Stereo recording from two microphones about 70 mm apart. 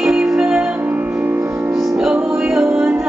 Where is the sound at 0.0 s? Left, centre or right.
Centre.